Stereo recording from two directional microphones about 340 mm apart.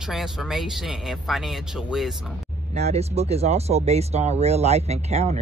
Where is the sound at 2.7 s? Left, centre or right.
Centre.